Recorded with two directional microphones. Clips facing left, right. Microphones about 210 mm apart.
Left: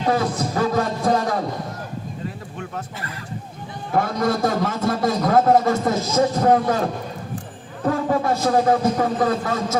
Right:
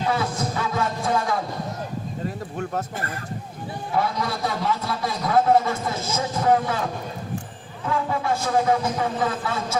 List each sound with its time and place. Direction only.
0.1 s music: 40° left (ahead or behind)
2.6 s speech: 45° right (ahead or behind)
3.9 s a man's voice: 45° left (ahead or behind)
7.9 s a man's voice: 40° left (ahead or behind)